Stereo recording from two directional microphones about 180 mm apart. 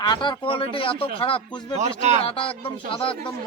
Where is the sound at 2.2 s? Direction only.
30° left (ahead or behind).